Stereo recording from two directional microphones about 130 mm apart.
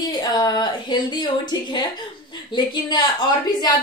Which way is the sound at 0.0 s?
30° left (ahead or behind).